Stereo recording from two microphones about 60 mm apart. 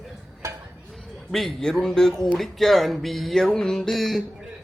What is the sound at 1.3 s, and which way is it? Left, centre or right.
Speech, centre.